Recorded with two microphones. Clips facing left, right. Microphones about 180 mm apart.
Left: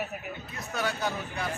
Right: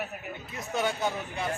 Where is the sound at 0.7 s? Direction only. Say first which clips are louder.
Right 2 dB; 20° right (ahead or behind).